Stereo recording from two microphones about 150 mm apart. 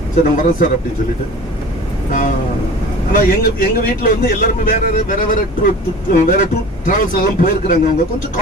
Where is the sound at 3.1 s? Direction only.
65° left (ahead or behind).